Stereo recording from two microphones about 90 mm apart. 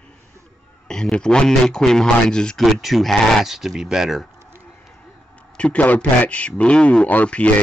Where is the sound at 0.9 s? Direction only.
10° left (ahead or behind).